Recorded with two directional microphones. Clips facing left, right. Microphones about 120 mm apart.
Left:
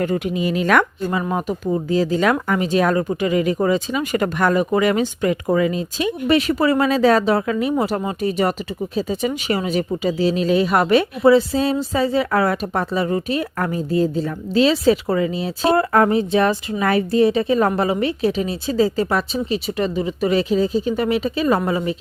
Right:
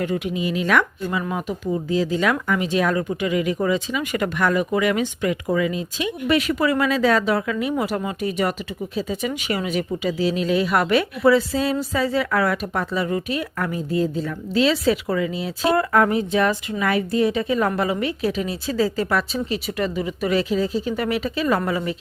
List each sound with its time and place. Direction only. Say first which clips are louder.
0.0 s speech: left 3 dB; 45° left (ahead or behind); by 21.9 s 25° left (ahead or behind)